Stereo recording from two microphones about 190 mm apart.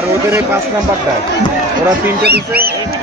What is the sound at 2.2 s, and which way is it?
Speech, 55° right (ahead or behind).